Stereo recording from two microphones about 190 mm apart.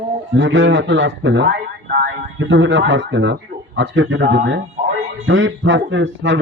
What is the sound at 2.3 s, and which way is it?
Speech, 80° right.